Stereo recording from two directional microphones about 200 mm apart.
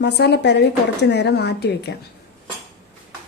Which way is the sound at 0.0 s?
60° left (ahead or behind).